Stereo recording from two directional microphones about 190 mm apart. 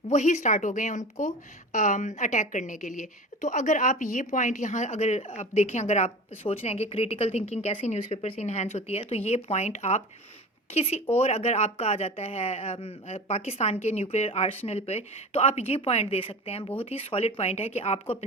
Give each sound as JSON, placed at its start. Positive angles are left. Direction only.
{"t": 0.1, "sound": "a woman's voice", "side_deg": 40}